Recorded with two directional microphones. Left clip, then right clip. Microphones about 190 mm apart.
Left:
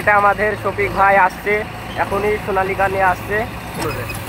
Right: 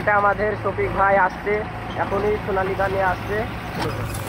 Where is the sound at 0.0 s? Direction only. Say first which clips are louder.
Left 5 dB; 25° left (ahead or behind).